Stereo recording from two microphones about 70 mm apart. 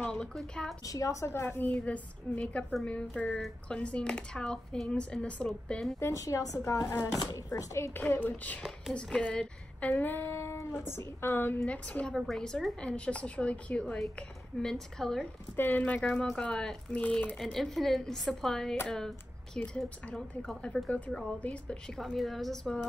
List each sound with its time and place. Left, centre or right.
0.0 s a woman's voice: centre
0.8 s a woman's voice: left
1.2 s a woman's voice: left; by 5.5 s centre
5.9 s a woman's voice: left
8.1 s a woman's voice: left
9.9 s female singing: left
11.6 s a woman's voice: centre
14.6 s speech: centre
15.5 s speech: left
17.4 s a woman's voice: centre
21.9 s a woman's voice: centre